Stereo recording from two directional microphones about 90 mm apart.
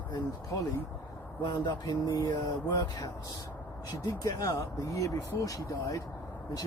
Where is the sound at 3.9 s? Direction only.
50° left (ahead or behind).